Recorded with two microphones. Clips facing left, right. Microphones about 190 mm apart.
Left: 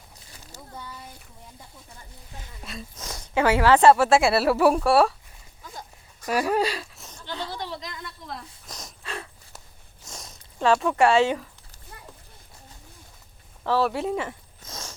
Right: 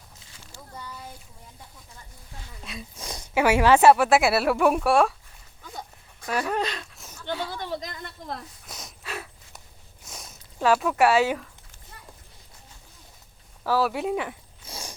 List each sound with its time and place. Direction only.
2.6 s speech: centre (ahead or behind)
3.0 s speech: 10° right (ahead or behind)
6.2 s speech: 10° left (ahead or behind)
7.6 s a woman's voice: 45° right (ahead or behind)
8.6 s a sound: centre (ahead or behind)
10.1 s zipper: centre (ahead or behind)
13.7 s a sound: 5° right (ahead or behind)